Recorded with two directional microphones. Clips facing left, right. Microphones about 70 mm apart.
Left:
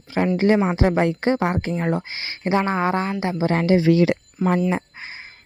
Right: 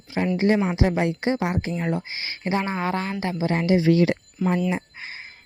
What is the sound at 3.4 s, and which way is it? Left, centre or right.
Speech, left.